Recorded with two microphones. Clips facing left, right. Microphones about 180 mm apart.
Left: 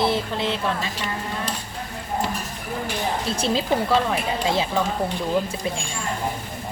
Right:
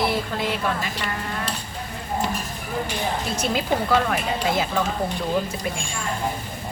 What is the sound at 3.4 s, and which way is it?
Speech, 30° left (ahead or behind).